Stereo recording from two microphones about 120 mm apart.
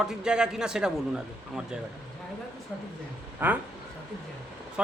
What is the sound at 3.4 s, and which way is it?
Speech, 15° right (ahead or behind).